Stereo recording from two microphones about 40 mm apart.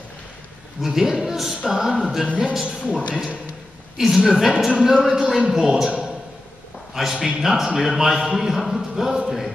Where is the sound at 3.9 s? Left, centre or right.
Centre.